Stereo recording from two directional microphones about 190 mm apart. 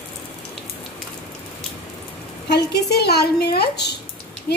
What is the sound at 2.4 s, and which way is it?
A woman's voice, 60° left (ahead or behind).